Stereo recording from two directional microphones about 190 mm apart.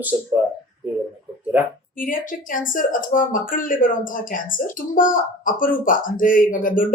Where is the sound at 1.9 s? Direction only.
45° left (ahead or behind).